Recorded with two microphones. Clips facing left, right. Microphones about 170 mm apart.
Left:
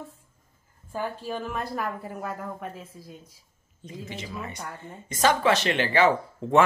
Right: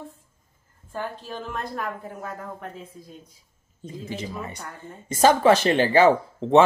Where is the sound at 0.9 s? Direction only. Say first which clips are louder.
Left 1 dB; 10° left (ahead or behind).